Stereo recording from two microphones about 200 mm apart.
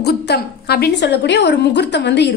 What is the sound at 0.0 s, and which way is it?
A woman's voice, 55° left (ahead or behind).